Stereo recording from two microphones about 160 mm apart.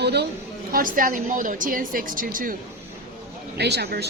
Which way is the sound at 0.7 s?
60° right (ahead or behind).